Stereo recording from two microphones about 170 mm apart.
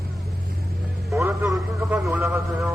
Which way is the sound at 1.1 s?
15° right (ahead or behind).